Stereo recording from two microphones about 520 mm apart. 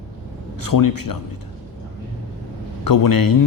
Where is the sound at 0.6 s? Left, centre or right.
Left.